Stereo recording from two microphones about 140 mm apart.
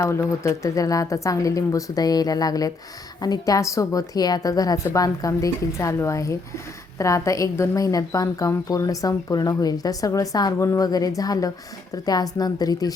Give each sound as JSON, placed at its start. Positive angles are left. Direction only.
{"t": 0.0, "sound": "a woman's voice", "side_deg": 20}